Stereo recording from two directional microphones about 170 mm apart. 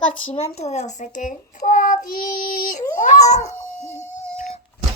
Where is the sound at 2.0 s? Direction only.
55° left (ahead or behind).